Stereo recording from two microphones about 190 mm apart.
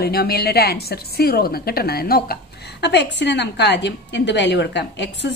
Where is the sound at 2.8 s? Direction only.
65° left (ahead or behind).